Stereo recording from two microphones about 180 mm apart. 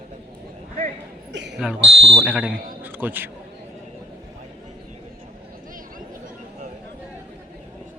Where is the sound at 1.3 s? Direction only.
75° right (ahead or behind).